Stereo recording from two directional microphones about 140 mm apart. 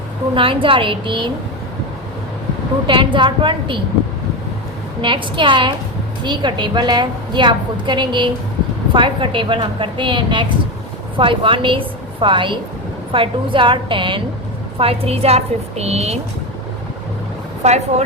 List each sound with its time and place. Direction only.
0.3 s a woman's voice: 40° right (ahead or behind)
2.8 s a woman's voice: 35° right (ahead or behind)
4.9 s a woman's voice: 35° right (ahead or behind)
17.6 s a woman's voice: 55° right (ahead or behind)